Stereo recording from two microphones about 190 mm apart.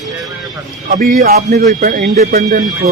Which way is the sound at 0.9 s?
50° right (ahead or behind).